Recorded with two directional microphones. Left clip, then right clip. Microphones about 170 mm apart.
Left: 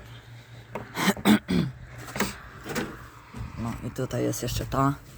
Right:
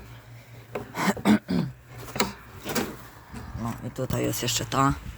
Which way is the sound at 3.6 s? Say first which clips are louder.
Even; 10° left (ahead or behind).